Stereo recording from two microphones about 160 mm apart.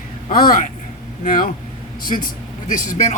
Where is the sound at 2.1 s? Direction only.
55° left (ahead or behind).